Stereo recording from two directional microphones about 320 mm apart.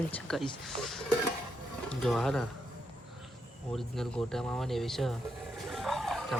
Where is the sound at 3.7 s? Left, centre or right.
Centre.